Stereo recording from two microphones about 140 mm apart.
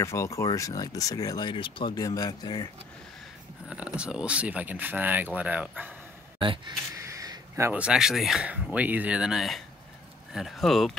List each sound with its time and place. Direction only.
0.0 s speech: 20° left (ahead or behind)
3.6 s speech: 10° right (ahead or behind)
6.4 s speech: 35° right (ahead or behind)
7.0 s a sound: 25° right (ahead or behind)
7.8 s speech: 5° right (ahead or behind)